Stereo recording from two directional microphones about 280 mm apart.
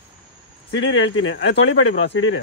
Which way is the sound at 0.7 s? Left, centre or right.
Left.